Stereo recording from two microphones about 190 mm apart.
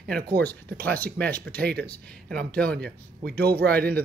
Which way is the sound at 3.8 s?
55° right (ahead or behind).